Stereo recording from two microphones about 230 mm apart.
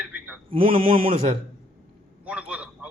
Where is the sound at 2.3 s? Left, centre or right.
Centre.